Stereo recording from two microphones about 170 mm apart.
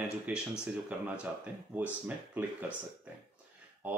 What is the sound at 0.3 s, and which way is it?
Speech, 5° right (ahead or behind).